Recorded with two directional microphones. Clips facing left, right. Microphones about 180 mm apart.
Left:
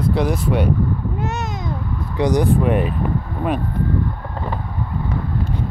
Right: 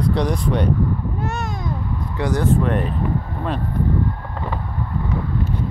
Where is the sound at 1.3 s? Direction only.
20° left (ahead or behind).